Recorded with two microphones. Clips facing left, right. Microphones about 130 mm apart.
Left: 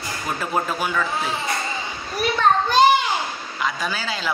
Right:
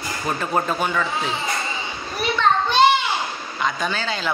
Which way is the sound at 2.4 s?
45° left (ahead or behind).